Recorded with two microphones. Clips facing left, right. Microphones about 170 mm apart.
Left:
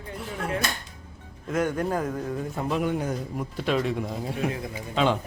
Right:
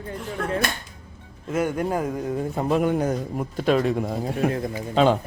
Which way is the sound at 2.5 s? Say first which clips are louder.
Right 5 dB; 45° right (ahead or behind).